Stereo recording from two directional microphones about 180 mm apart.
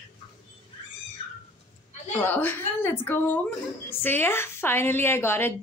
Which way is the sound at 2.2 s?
10° left (ahead or behind).